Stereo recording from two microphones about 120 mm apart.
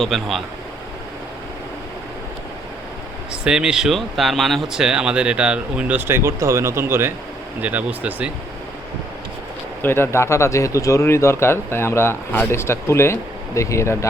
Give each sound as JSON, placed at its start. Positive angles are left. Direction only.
{"t": 0.0, "sound": "speech", "side_deg": 0}
{"t": 3.4, "sound": "speech", "side_deg": -5}
{"t": 9.8, "sound": "speech", "side_deg": 20}